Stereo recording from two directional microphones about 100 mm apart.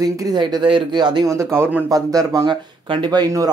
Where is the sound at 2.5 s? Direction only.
50° right (ahead or behind).